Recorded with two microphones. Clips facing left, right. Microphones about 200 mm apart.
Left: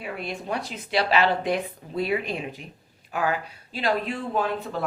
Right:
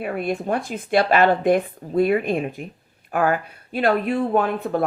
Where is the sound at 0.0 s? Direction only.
50° right (ahead or behind).